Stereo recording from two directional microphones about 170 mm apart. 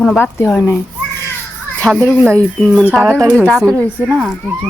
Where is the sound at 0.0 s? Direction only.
10° left (ahead or behind).